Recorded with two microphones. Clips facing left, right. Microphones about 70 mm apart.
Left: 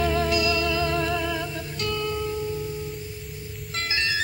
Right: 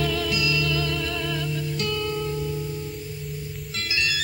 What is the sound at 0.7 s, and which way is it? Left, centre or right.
Music, left.